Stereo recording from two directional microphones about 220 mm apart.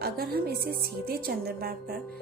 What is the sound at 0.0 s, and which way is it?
A woman's voice, 45° right (ahead or behind).